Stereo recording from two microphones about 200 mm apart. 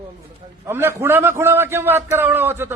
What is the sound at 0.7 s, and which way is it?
A man's voice, 10° right (ahead or behind).